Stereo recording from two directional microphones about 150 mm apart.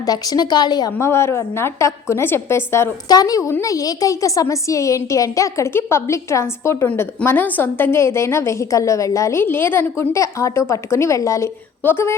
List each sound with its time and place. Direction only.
0.0 s a woman's voice: 25° left (ahead or behind)
0.9 s a woman's voice: 15° left (ahead or behind)